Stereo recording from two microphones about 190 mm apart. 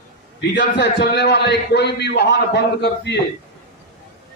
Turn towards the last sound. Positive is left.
turn(degrees=65)  # may be behind; listen again after turning